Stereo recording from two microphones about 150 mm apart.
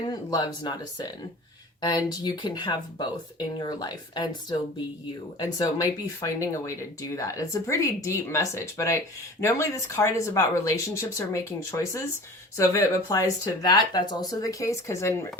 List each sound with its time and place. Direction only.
0.1 s speech: 25° left (ahead or behind)